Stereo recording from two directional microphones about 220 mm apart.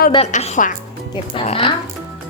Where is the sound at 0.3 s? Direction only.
35° left (ahead or behind).